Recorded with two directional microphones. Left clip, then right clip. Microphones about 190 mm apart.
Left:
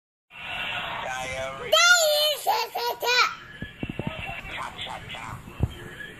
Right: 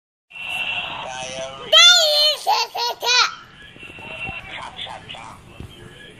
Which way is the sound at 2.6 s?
40° left (ahead or behind).